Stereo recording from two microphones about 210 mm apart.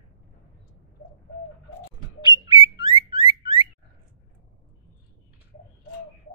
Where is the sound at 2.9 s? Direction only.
25° left (ahead or behind).